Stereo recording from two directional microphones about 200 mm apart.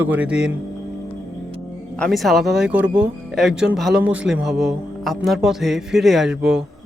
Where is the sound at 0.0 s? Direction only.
5° right (ahead or behind).